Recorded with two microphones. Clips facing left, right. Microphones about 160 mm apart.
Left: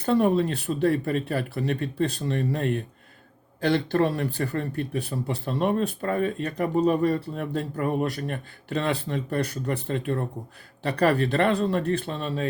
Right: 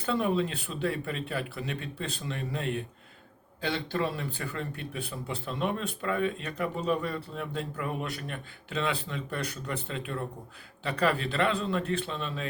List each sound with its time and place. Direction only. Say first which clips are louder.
0.1 s speech: left 6 dB; 50° left (ahead or behind)
3.9 s speech: left 8 dB; 45° left (ahead or behind)